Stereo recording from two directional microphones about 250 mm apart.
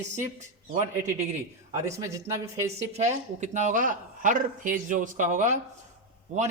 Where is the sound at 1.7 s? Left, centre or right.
Centre.